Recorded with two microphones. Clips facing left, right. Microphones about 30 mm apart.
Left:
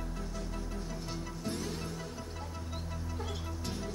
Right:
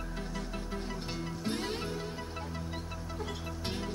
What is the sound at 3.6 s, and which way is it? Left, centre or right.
Music, right.